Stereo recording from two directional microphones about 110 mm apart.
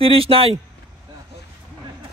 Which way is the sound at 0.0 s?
60° right (ahead or behind).